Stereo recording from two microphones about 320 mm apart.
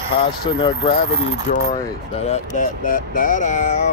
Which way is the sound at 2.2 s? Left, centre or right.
Left.